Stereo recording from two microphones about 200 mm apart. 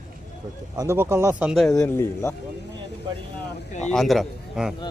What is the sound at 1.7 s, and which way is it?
Speech, 15° left (ahead or behind).